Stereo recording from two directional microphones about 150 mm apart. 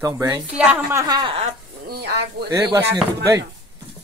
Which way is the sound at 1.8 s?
90° right.